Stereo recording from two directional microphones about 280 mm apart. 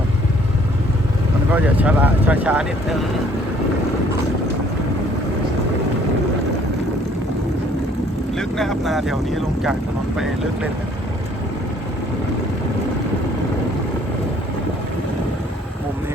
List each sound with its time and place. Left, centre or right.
1.5 s speech: centre
8.4 s speech: centre